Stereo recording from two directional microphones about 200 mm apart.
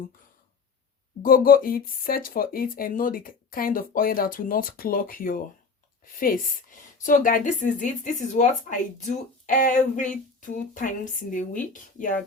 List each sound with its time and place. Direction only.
1.2 s speech: 45° left (ahead or behind)